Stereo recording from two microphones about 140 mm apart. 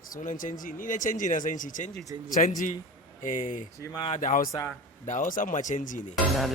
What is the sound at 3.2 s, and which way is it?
Speech, 70° left (ahead or behind).